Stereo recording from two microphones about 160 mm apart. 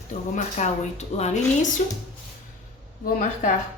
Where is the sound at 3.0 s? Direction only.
60° left (ahead or behind).